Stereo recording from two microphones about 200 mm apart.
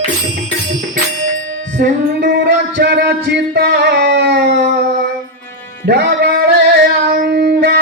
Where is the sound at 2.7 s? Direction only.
55° right (ahead or behind).